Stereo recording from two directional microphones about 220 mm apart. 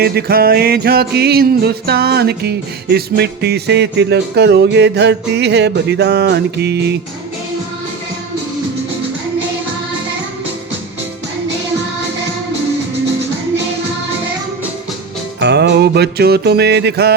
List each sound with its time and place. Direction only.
0.0 s music: 45° right (ahead or behind)
15.4 s music: 50° right (ahead or behind)